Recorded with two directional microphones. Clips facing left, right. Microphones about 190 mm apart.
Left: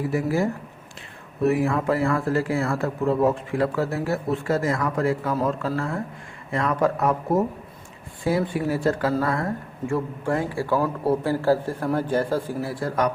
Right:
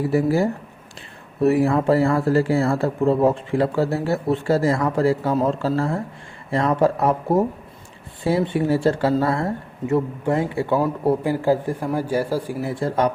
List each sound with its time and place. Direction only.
0.1 s speech: 35° right (ahead or behind); by 12.5 s 10° right (ahead or behind)
12.6 s speech: 25° right (ahead or behind)